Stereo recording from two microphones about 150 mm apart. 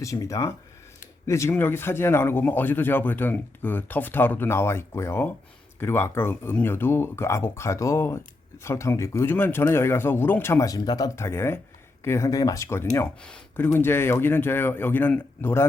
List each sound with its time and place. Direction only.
0.0 s speech: 20° left (ahead or behind)
13.2 s speech: 5° left (ahead or behind)